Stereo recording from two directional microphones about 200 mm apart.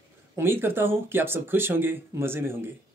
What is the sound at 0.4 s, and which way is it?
Speech, 10° right (ahead or behind).